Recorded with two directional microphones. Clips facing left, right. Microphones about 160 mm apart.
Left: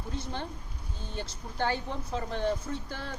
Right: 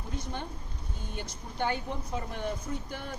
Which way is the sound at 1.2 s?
15° right (ahead or behind).